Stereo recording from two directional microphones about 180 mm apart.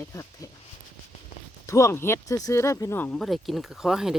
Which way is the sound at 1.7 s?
15° left (ahead or behind).